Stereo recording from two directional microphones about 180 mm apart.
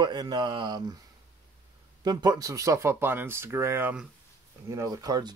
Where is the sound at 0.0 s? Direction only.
25° right (ahead or behind).